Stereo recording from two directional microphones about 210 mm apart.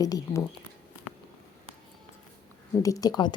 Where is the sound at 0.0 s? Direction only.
15° left (ahead or behind).